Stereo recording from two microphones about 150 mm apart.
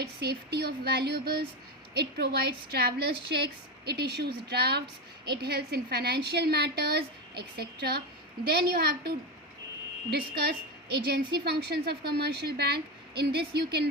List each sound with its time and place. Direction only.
0.0 s a woman's voice: 90° right